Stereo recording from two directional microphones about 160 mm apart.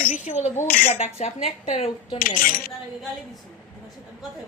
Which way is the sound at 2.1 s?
60° left (ahead or behind).